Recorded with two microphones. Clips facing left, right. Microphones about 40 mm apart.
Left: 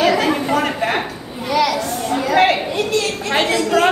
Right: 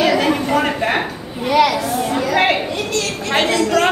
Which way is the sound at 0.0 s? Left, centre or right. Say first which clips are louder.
Even; centre.